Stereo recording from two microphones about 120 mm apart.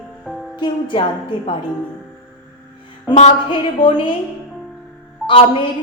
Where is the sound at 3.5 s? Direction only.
45° left (ahead or behind).